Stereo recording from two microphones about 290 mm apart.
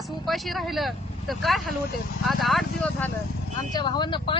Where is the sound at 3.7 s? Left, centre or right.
Centre.